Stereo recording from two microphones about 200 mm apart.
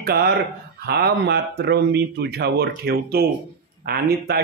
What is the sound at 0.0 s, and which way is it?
A man's voice, 50° right (ahead or behind).